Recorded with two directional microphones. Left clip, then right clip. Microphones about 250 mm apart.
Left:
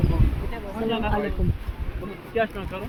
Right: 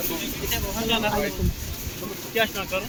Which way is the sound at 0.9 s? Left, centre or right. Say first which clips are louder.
Right 2 dB; centre.